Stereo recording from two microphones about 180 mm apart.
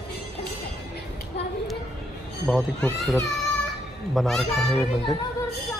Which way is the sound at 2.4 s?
Centre (ahead or behind).